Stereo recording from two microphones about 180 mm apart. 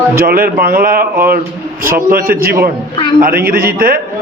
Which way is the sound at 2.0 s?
55° right (ahead or behind).